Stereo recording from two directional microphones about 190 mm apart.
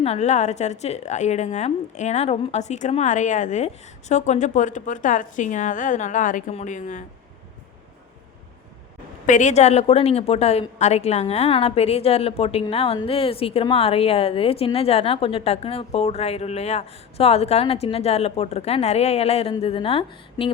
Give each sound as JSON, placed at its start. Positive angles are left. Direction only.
{"t": 0.0, "sound": "a woman's voice", "side_deg": 35}
{"t": 9.2, "sound": "a woman's voice", "side_deg": 40}